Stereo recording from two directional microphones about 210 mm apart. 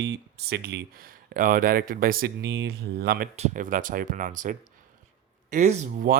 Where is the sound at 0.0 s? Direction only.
50° right (ahead or behind).